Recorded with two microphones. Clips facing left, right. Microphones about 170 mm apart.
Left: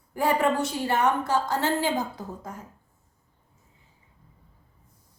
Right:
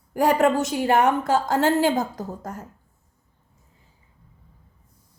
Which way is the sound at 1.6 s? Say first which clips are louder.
Right 6 dB; 50° right (ahead or behind).